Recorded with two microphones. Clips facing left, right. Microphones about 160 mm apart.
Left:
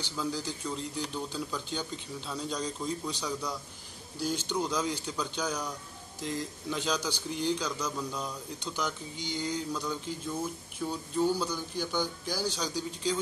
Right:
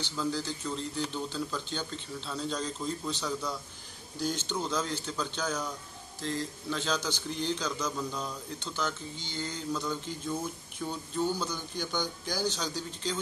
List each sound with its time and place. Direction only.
0.0 s speech: 10° left (ahead or behind)